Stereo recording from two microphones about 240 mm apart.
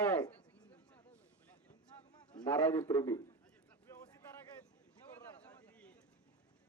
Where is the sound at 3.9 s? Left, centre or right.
Centre.